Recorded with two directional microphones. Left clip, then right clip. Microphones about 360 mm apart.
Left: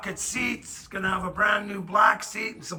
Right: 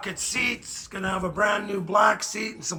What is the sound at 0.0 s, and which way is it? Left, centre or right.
Speech, centre.